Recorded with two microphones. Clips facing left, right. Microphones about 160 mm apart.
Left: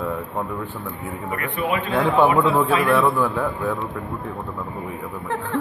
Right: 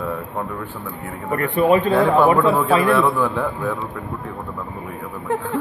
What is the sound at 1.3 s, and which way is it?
Speech, 40° right (ahead or behind).